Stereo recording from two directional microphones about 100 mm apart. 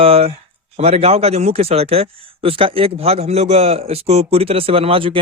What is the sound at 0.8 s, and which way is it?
Speech, 90° right.